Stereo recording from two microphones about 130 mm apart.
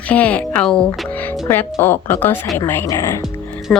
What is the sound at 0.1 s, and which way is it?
Speech, 10° left (ahead or behind).